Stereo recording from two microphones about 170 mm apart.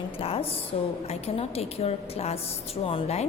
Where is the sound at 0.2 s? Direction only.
35° left (ahead or behind).